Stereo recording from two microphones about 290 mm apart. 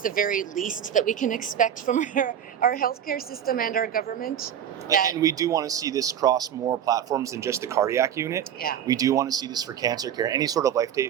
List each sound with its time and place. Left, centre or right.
0.0 s a woman's voice: left
5.1 s speech: centre